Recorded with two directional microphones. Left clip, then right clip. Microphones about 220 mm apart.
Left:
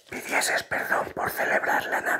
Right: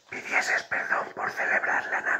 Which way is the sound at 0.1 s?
45° left (ahead or behind).